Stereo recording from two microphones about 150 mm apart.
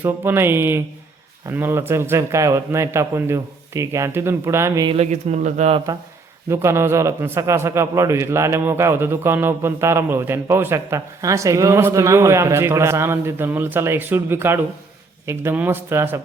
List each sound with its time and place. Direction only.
0.0 s a man's voice: 15° right (ahead or behind)
4.9 s speech: 45° right (ahead or behind)
6.5 s a man's voice: 20° right (ahead or behind)